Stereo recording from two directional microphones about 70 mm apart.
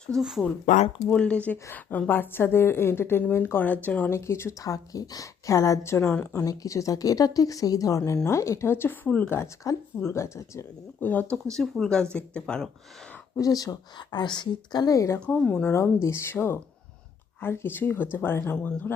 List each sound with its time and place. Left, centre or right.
0.2 s speech: centre
1.1 s a woman's voice: centre
4.1 s a woman's voice: left
4.6 s a woman's voice: left
6.3 s a woman's voice: left
11.0 s speech: left
11.8 s speech: centre
13.3 s speech: left
14.9 s a woman's voice: left
15.4 s speech: left
15.7 s a woman's voice: left